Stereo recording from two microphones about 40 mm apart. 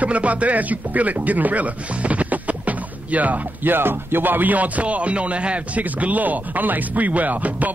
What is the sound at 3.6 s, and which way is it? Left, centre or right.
Speech, right.